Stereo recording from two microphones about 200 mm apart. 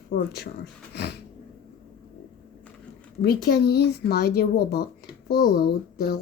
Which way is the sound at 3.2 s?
55° left (ahead or behind).